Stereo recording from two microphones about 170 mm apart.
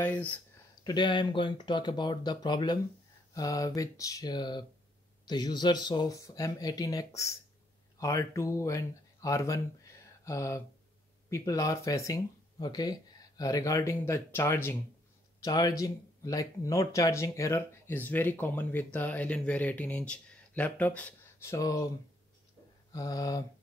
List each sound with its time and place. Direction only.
0.0 s speech: 10° left (ahead or behind)
0.8 s speech: 25° left (ahead or behind)
22.9 s speech: 20° left (ahead or behind)